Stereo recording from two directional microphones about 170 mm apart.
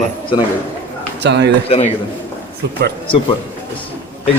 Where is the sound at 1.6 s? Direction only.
35° left (ahead or behind).